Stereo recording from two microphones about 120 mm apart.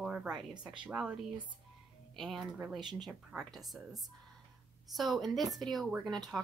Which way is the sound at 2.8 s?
40° right (ahead or behind).